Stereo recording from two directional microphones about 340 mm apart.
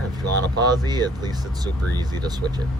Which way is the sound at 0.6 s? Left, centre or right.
Centre.